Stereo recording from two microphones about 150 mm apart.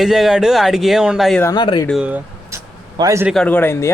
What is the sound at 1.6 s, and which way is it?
Speech, 30° left (ahead or behind).